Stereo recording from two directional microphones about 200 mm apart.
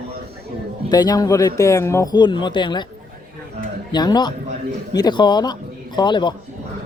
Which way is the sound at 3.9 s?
20° left (ahead or behind).